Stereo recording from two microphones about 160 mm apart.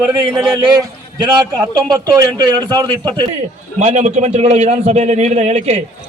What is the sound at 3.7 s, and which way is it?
A man's voice, 45° right (ahead or behind).